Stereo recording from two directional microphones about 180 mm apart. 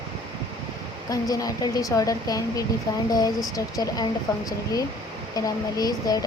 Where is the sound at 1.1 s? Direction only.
20° left (ahead or behind).